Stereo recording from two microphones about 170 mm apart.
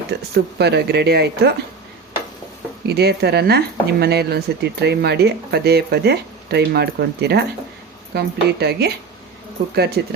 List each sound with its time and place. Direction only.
0.3 s speech: 80° right
2.8 s speech: 70° right (ahead or behind)